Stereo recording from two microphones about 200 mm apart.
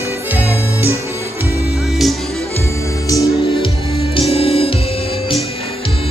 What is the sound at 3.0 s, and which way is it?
Music, 15° left (ahead or behind).